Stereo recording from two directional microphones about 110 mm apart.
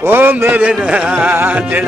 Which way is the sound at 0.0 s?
20° right (ahead or behind).